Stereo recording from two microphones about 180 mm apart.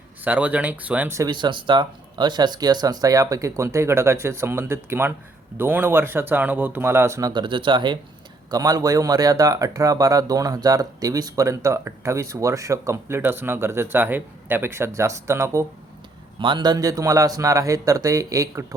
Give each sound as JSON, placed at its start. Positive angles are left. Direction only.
{"t": 0.3, "sound": "speech", "side_deg": -10}